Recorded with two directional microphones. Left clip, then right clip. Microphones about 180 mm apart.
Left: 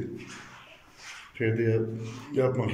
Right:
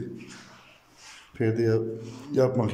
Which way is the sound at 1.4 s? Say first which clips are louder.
Right 2 dB; 15° right (ahead or behind).